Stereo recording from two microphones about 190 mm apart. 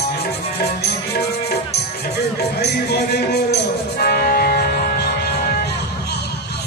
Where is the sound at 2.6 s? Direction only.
60° left (ahead or behind).